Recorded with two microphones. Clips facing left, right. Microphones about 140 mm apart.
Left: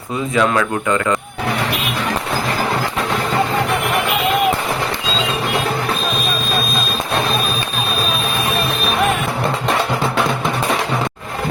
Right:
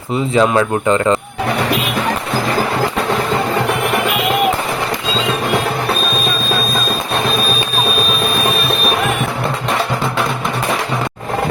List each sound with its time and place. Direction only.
0.3 s speech: 30° right (ahead or behind)